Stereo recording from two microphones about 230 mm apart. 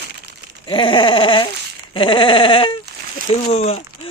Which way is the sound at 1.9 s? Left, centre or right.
Left.